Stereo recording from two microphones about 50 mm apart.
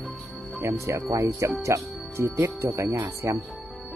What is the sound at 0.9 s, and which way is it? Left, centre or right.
Speech, right.